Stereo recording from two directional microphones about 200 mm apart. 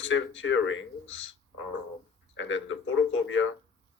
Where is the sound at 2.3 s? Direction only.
70° left (ahead or behind).